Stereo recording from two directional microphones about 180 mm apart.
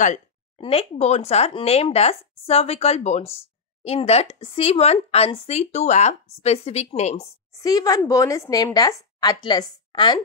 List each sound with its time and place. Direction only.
0.6 s speech: 30° left (ahead or behind)
7.6 s a woman's voice: 20° left (ahead or behind)